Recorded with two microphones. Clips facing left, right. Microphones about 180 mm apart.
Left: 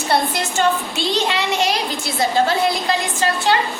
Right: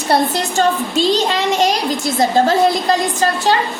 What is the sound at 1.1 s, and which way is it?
A child's voice, 40° right (ahead or behind).